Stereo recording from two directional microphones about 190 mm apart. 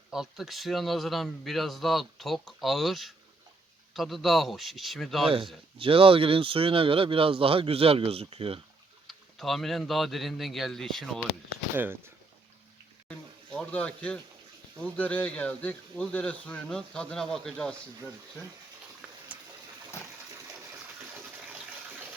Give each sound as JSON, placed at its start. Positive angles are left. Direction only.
{"t": 0.1, "sound": "a man's voice", "side_deg": 0}
{"t": 5.7, "sound": "speech", "side_deg": -30}
{"t": 9.0, "sound": "a man's voice", "side_deg": 0}
{"t": 13.1, "sound": "a sound", "side_deg": 5}
{"t": 14.8, "sound": "speech", "side_deg": 10}
{"t": 19.3, "sound": "a sound", "side_deg": -10}
{"t": 20.3, "sound": "water", "side_deg": -15}